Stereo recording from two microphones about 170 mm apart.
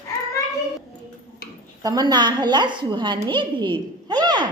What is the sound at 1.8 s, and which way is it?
A woman's voice, 25° right (ahead or behind).